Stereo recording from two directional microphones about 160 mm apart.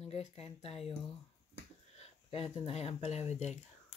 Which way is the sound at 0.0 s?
40° left (ahead or behind).